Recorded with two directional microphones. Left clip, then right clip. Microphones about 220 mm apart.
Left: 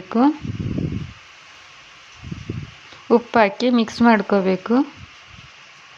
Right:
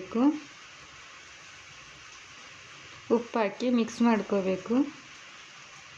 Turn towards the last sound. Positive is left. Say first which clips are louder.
# left 9 dB
turn(degrees=20)  # may be behind; listen again after turning